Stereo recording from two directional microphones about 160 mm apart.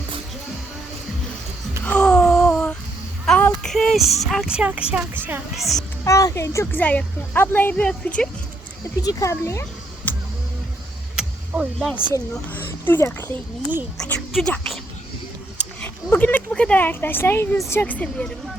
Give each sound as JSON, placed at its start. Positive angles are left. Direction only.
{"t": 1.8, "sound": "a sound", "side_deg": 5}
{"t": 3.2, "sound": "speech", "side_deg": 5}
{"t": 5.5, "sound": "speech", "side_deg": 0}
{"t": 6.1, "sound": "a woman's voice", "side_deg": 20}
{"t": 9.0, "sound": "speech", "side_deg": 20}
{"t": 10.0, "sound": "music", "side_deg": 10}
{"t": 11.2, "sound": "vehicle", "side_deg": -5}
{"t": 12.1, "sound": "a woman's voice", "side_deg": 10}
{"t": 15.8, "sound": "a woman's voice", "side_deg": 10}